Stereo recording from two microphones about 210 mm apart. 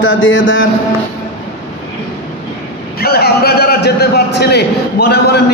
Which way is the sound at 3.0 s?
50° left (ahead or behind).